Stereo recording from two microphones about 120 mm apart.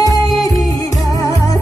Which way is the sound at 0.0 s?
30° left (ahead or behind).